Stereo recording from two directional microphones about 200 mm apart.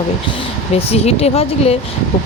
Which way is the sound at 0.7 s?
30° left (ahead or behind).